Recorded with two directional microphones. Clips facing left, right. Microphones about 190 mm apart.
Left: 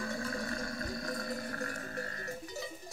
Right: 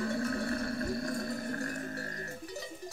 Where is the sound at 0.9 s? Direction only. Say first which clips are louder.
Right 3 dB; 25° right (ahead or behind).